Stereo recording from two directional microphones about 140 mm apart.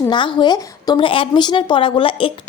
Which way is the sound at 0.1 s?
35° left (ahead or behind).